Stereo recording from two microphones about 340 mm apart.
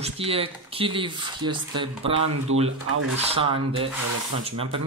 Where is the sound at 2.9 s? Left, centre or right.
Right.